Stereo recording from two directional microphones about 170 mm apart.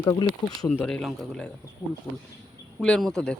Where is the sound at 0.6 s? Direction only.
5° left (ahead or behind).